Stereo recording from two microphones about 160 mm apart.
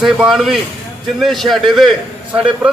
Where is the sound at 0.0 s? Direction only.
Centre (ahead or behind).